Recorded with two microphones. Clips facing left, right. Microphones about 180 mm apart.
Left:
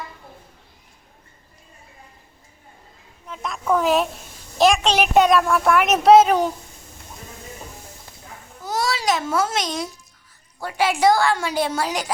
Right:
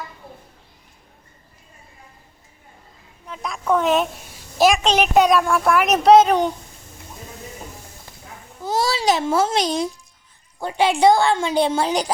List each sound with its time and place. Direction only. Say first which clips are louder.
3.2 s a woman's voice: right 1 dB; centre (ahead or behind)
8.6 s a child's voice: right 3 dB; 25° right (ahead or behind)